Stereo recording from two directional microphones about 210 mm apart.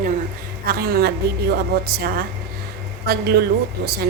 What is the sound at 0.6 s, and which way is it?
Speech, 45° right (ahead or behind).